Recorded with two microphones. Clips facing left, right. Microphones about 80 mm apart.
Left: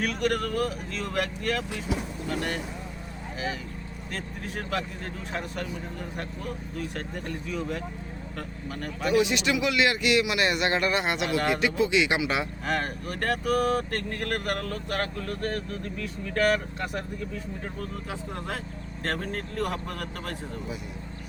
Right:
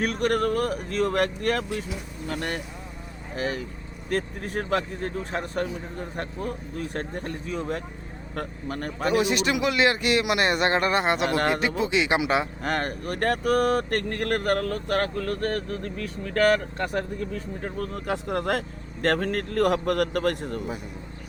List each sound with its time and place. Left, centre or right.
0.0 s speech: right
12.6 s speech: right